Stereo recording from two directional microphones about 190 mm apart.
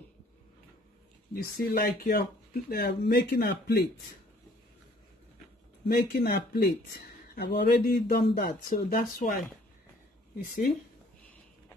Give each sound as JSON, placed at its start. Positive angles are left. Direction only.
{"t": 1.3, "sound": "speech", "side_deg": 50}
{"t": 5.9, "sound": "speech", "side_deg": 55}